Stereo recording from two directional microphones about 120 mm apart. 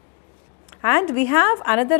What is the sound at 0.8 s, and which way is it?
A woman's voice, 20° left (ahead or behind).